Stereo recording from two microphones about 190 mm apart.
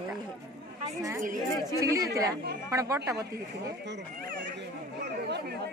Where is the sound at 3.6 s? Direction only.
65° right (ahead or behind).